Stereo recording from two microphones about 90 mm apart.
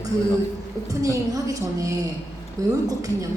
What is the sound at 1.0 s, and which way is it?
A woman's voice, 40° right (ahead or behind).